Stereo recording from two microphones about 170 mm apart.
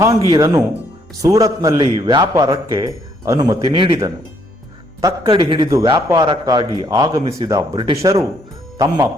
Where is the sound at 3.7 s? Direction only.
30° right (ahead or behind).